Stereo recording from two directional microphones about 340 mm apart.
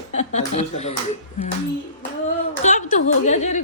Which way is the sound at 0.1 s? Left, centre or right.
Centre.